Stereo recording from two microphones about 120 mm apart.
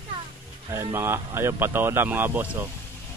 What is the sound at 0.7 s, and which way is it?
Speech, 20° right (ahead or behind).